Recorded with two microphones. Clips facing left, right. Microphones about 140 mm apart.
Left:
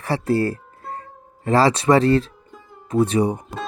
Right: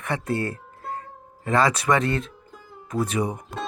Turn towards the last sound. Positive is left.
turn(degrees=30)  # may be behind; listen again after turning